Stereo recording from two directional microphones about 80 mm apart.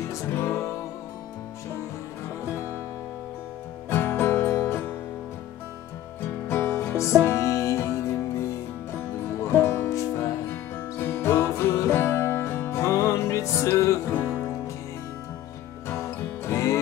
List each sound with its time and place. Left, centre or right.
0.1 s music: left
3.9 s music: left
6.4 s music: left
15.9 s music: left